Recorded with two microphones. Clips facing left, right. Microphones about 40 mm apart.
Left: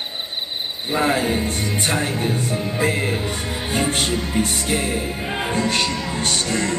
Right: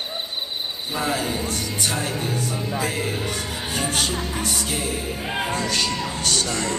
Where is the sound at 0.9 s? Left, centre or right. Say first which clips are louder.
Left 6 dB; left.